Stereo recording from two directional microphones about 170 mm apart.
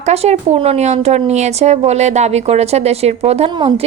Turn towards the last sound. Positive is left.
turn(degrees=-30)  # may be behind; listen again after turning